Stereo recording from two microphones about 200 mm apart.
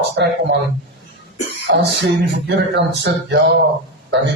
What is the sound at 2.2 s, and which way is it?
Speech, 60° right (ahead or behind).